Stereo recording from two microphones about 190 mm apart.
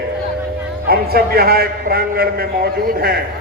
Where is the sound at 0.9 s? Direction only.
55° right (ahead or behind).